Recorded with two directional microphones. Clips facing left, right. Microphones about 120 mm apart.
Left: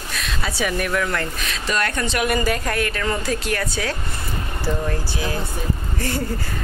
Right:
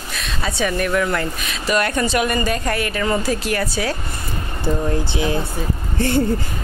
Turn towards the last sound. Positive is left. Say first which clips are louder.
# right 7 dB
turn(degrees=-30)  # may be behind; listen again after turning